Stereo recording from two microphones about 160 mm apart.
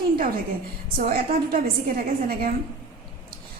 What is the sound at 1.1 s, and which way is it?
A woman's voice, 65° right (ahead or behind).